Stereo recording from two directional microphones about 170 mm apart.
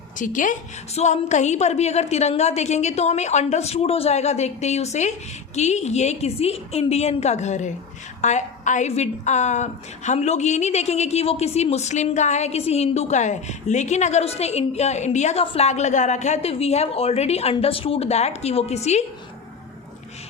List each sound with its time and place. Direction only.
0.2 s a woman's voice: 50° left (ahead or behind)